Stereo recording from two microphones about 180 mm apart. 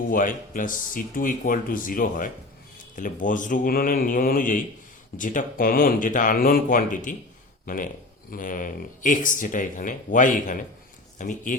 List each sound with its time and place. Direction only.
0.1 s speech: 50° left (ahead or behind)